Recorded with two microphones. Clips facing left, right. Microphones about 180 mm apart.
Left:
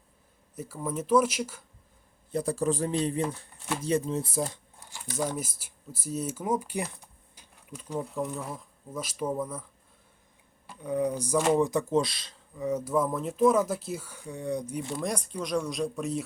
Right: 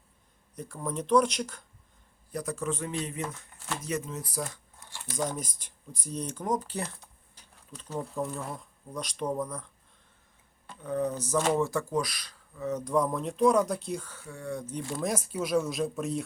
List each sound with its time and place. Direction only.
0.5 s speech: 5° left (ahead or behind)
2.3 s speech: 30° left (ahead or behind)
4.9 s speech: 5° left (ahead or behind)
7.3 s insect: 10° left (ahead or behind)
8.1 s speech: centre (ahead or behind)
10.7 s speech: 10° left (ahead or behind)
12.6 s speech: 5° left (ahead or behind)
14.9 s speech: 5° right (ahead or behind)